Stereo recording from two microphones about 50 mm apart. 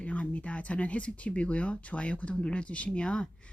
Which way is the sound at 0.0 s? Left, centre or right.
Left.